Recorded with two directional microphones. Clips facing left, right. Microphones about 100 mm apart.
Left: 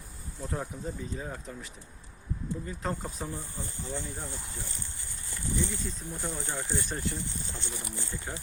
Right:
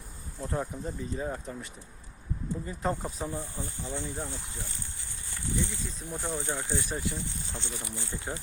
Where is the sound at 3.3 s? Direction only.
20° right (ahead or behind).